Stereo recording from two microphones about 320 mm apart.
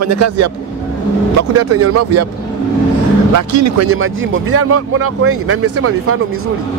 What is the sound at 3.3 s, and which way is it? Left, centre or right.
Speech, right.